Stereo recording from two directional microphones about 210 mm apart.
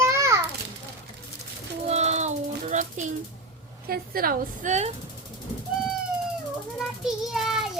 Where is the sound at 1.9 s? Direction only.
30° right (ahead or behind).